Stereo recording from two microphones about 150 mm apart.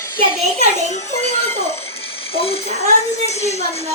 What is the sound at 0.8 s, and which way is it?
Speech, 50° left (ahead or behind).